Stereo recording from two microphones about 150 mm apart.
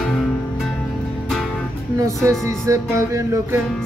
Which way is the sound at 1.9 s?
20° right (ahead or behind).